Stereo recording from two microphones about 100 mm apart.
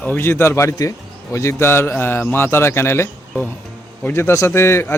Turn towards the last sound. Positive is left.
turn(degrees=25)  # may be behind; listen again after turning